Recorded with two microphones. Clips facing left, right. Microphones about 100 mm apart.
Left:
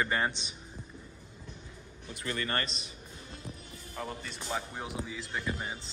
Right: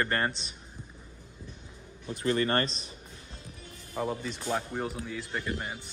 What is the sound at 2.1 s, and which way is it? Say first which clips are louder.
Speech: right 7 dB; 35° right (ahead or behind).